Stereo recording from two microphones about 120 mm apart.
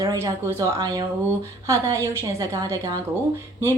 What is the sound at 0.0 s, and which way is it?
Speech, 30° right (ahead or behind).